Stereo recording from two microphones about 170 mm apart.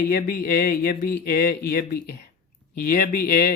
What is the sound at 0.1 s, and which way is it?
Speech, 65° left (ahead or behind).